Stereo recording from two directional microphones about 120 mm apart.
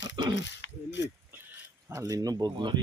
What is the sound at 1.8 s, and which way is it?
Speech, 25° right (ahead or behind).